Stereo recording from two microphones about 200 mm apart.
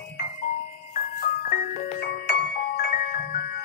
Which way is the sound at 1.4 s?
45° left (ahead or behind).